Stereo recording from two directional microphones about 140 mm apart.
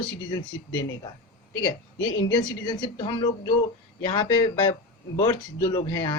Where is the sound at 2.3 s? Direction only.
30° left (ahead or behind).